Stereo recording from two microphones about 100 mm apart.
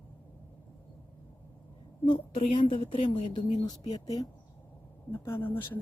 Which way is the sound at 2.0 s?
65° left (ahead or behind).